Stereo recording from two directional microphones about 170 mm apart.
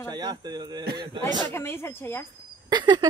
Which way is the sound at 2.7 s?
25° right (ahead or behind).